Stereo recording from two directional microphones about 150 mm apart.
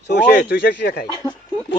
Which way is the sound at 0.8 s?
90° left.